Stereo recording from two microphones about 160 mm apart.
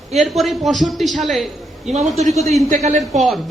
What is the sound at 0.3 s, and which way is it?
Speech, centre (ahead or behind).